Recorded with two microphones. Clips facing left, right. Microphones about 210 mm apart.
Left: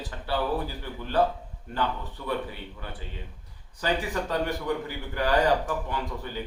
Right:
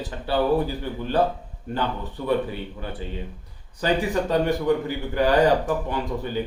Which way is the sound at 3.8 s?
20° right (ahead or behind).